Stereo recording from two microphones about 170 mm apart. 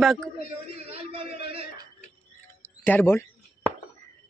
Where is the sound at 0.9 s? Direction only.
35° right (ahead or behind).